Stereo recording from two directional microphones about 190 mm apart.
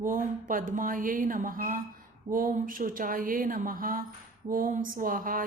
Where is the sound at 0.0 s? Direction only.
45° right (ahead or behind).